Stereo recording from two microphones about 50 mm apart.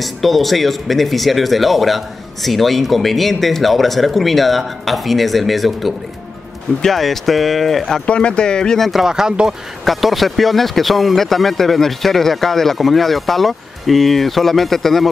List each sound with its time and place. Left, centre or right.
0.0 s speech: centre
8.1 s speech: centre
9.0 s speech: centre
9.8 s speech: centre